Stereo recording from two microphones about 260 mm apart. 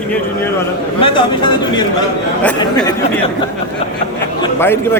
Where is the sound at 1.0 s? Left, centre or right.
Centre.